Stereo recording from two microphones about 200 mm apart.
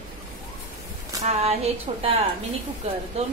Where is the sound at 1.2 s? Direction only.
30° right (ahead or behind).